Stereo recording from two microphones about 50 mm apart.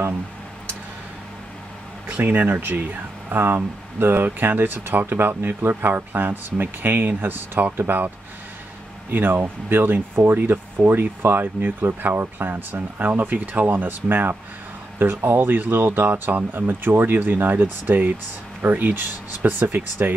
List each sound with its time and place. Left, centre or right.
2.0 s speech: right
9.1 s speech: right